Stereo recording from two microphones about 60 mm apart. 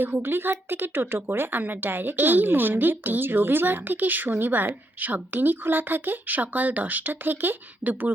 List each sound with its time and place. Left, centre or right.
0.0 s speech: right